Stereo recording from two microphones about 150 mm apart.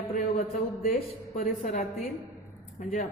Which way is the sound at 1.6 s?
50° left (ahead or behind).